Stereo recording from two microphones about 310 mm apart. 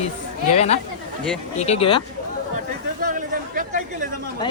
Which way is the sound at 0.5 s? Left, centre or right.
Left.